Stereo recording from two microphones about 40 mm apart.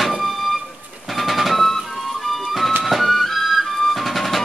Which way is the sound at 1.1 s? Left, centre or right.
Centre.